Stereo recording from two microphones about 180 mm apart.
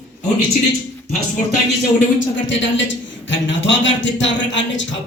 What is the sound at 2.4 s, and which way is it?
A man's voice, 90° left.